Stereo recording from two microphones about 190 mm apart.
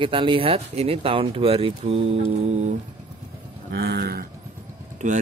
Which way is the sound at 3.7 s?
55° right (ahead or behind).